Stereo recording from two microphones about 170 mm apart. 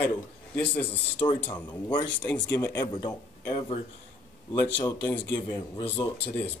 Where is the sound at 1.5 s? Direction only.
25° left (ahead or behind).